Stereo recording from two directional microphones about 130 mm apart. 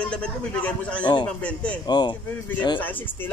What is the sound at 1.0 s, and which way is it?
Speech, 35° left (ahead or behind).